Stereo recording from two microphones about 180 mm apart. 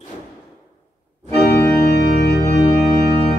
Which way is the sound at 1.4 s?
65° left (ahead or behind).